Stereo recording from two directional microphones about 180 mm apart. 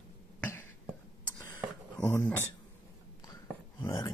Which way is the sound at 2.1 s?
10° left (ahead or behind).